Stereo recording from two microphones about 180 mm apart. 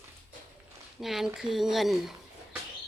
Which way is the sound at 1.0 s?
Centre (ahead or behind).